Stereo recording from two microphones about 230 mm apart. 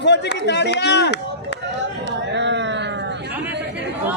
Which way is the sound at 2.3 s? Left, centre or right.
Right.